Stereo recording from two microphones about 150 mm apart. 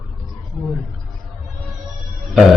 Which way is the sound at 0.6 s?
Centre (ahead or behind).